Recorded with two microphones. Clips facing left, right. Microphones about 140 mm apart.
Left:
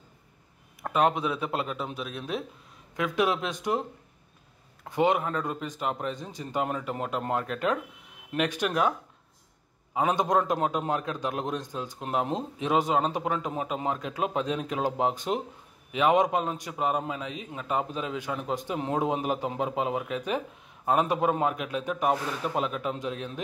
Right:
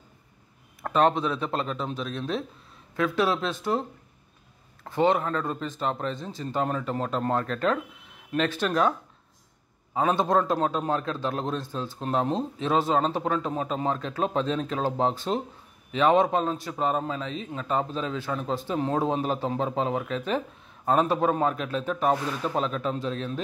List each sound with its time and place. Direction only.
0.8 s a man's voice: 10° left (ahead or behind)
4.8 s a man's voice: 15° left (ahead or behind)
9.9 s a man's voice: 15° left (ahead or behind)